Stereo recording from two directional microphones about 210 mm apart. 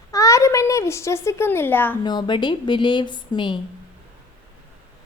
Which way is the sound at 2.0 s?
20° left (ahead or behind).